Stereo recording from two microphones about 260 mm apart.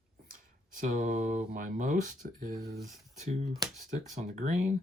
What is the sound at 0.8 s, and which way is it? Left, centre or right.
Speech, right.